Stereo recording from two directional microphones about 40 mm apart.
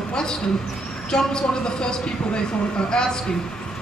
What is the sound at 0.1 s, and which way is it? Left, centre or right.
A man's voice, centre.